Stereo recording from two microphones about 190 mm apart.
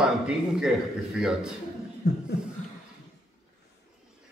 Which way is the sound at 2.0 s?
60° left (ahead or behind).